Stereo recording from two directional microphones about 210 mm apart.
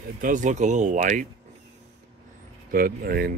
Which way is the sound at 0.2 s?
35° right (ahead or behind).